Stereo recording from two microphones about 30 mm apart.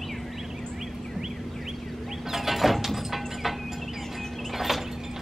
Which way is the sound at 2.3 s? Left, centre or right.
Centre.